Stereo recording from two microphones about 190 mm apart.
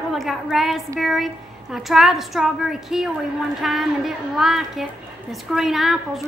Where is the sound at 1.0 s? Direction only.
Centre (ahead or behind).